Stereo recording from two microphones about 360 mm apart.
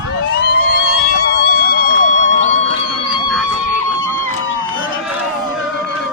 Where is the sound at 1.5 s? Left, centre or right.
Left.